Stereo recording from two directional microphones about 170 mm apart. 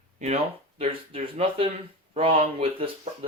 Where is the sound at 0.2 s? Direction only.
40° right (ahead or behind).